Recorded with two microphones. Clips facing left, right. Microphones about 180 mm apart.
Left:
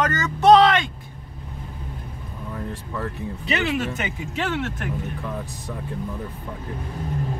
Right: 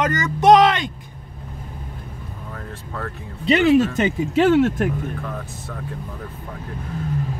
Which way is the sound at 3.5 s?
40° right (ahead or behind).